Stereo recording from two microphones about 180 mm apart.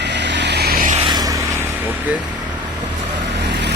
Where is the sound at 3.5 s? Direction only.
70° right (ahead or behind).